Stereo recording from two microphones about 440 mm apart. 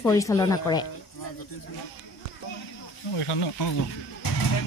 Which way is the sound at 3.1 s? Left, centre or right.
Left.